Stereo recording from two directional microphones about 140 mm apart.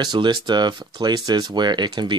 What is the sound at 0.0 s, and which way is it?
Speech, 30° right (ahead or behind).